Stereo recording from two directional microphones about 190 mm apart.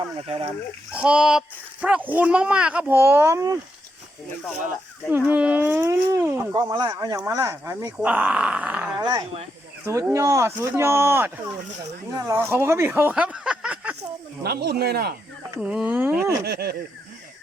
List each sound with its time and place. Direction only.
0.2 s speech: 30° right (ahead or behind)
0.9 s speech: 5° right (ahead or behind)
5.0 s speech: 10° right (ahead or behind)
9.0 s speech: 20° right (ahead or behind)
9.8 s speech: 15° right (ahead or behind)
14.4 s speech: 55° right (ahead or behind)
15.4 s speech: 5° right (ahead or behind)
16.5 s speech: 55° right (ahead or behind)